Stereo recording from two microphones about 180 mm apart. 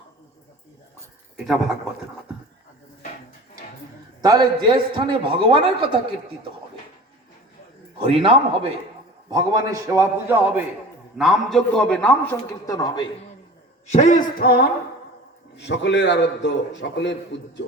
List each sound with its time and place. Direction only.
1.4 s speech: centre (ahead or behind)
4.2 s a man's voice: 20° right (ahead or behind)
8.0 s a man's voice: 30° right (ahead or behind)
9.3 s a man's voice: 20° right (ahead or behind)
11.2 s a man's voice: centre (ahead or behind); by 13.1 s 20° left (ahead or behind)
13.8 s speech: 40° left (ahead or behind); by 14.7 s 55° left (ahead or behind)
15.5 s a man's voice: 75° left (ahead or behind)